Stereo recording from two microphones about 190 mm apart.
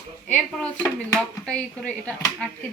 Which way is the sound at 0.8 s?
5° left (ahead or behind).